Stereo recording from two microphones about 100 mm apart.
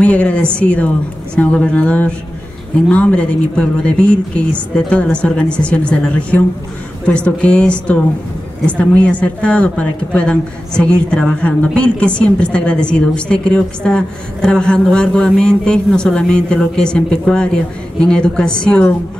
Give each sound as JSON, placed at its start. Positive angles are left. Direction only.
{"t": 0.0, "sound": "a woman's voice", "side_deg": 15}